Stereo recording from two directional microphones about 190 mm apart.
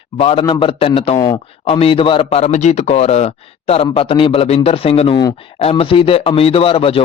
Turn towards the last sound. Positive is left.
turn(degrees=30)  # may be behind; listen again after turning